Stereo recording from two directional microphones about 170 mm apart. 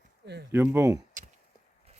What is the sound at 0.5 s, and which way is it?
Speech, 15° right (ahead or behind).